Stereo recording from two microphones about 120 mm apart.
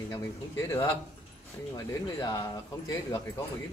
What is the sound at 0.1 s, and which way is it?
Speech, 25° left (ahead or behind).